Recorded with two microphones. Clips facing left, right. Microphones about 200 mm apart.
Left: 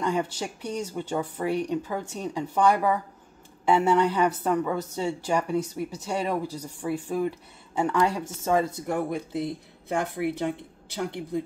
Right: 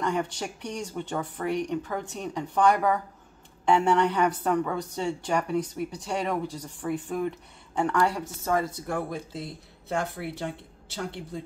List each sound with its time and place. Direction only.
0.0 s a woman's voice: 10° left (ahead or behind)
8.0 s a woman's voice: 20° left (ahead or behind)